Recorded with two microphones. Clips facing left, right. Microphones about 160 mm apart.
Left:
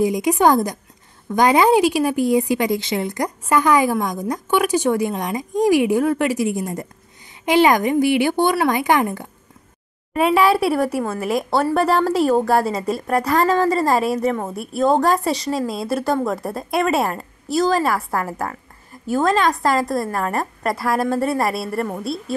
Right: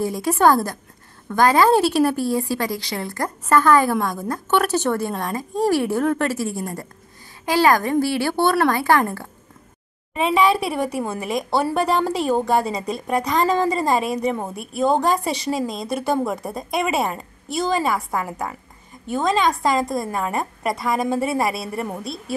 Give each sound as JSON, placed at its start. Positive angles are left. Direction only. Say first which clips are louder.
{"t": 0.0, "sound": "a woman's voice", "louder": "left 2 dB", "side_deg": 15}
{"t": 10.1, "sound": "a woman's voice", "louder": "left 2 dB", "side_deg": 5}